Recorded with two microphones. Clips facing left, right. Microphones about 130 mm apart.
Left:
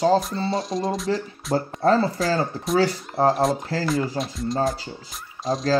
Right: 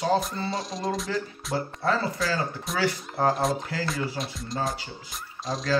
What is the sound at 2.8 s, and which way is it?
Speech, 30° left (ahead or behind).